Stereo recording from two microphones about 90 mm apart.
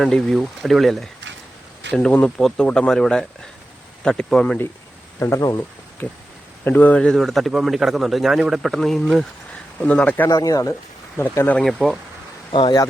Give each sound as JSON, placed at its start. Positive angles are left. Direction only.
{"t": 0.0, "sound": "a man's voice", "side_deg": 5}
{"t": 5.4, "sound": "speech", "side_deg": 40}
{"t": 6.0, "sound": "a man's voice", "side_deg": 20}
{"t": 9.8, "sound": "speech", "side_deg": 15}
{"t": 10.2, "sound": "speech", "side_deg": 40}
{"t": 11.2, "sound": "speech", "side_deg": 20}
{"t": 11.5, "sound": "a man's voice", "side_deg": 0}
{"t": 12.5, "sound": "speech", "side_deg": 65}